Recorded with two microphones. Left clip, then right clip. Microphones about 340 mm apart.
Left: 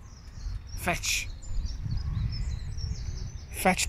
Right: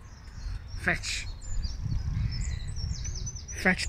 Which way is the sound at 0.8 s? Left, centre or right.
Centre.